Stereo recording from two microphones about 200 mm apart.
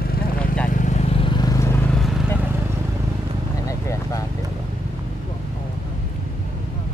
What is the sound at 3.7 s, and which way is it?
Vehicle, 15° left (ahead or behind).